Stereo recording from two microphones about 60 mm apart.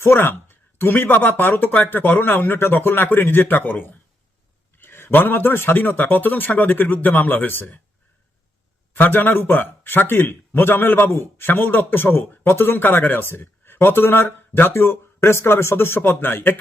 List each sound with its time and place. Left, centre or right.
0.0 s speech: left
9.0 s speech: left
12.5 s speech: left